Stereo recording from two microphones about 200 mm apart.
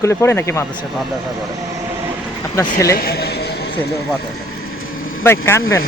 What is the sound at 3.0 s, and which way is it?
A man's voice, 50° left (ahead or behind).